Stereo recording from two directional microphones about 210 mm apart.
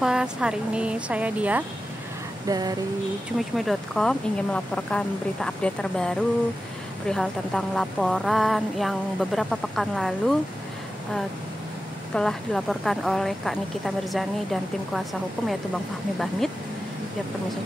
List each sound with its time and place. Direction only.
0.0 s speech: 5° right (ahead or behind)
2.4 s a sound: 15° right (ahead or behind)
3.3 s speech: centre (ahead or behind)
12.1 s speech: 5° left (ahead or behind)